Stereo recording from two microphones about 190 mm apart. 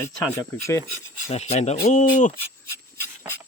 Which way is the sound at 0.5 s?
15° left (ahead or behind).